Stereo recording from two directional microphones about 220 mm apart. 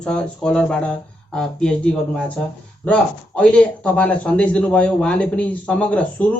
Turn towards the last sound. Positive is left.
turn(degrees=5)  # may be behind; listen again after turning